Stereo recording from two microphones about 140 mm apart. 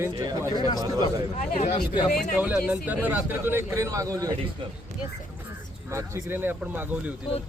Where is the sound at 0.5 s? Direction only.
30° left (ahead or behind).